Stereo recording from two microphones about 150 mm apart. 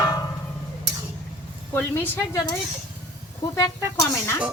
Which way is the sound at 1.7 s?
15° left (ahead or behind).